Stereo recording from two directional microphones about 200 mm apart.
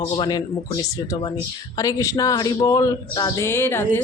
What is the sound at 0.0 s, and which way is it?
A woman's voice, 20° left (ahead or behind).